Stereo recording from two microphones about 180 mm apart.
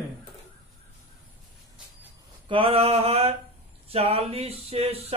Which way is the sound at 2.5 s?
30° right (ahead or behind).